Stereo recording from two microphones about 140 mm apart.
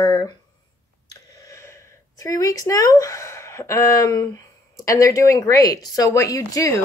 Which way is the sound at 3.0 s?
20° left (ahead or behind).